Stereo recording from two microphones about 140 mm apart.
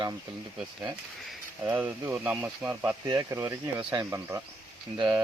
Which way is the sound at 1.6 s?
15° right (ahead or behind).